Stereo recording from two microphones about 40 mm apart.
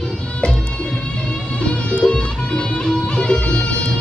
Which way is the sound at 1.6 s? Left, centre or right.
Left.